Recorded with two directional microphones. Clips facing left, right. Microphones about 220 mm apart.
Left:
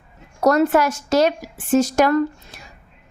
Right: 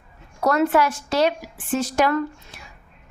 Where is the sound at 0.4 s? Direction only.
45° left (ahead or behind).